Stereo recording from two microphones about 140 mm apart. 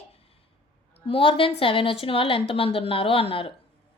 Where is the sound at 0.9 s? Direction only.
40° left (ahead or behind).